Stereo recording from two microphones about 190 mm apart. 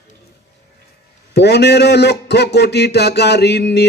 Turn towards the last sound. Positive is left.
turn(degrees=60)  # may be behind; listen again after turning